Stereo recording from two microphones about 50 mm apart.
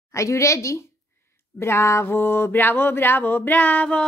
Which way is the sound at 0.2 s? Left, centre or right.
Left.